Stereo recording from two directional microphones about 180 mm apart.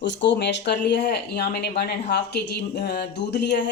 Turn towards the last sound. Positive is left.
turn(degrees=70)  # may be behind; listen again after turning